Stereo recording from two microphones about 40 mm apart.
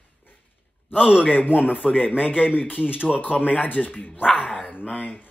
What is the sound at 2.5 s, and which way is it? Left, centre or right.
Speech, left.